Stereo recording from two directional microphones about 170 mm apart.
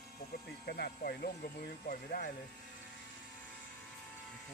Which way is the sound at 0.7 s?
60° left (ahead or behind).